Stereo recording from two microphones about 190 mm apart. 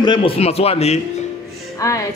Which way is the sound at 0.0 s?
25° left (ahead or behind).